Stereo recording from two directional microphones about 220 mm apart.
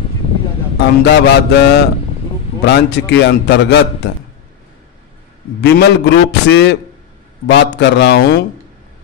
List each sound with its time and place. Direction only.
1.0 s a man's voice: 50° left (ahead or behind)
5.6 s a man's voice: 50° left (ahead or behind)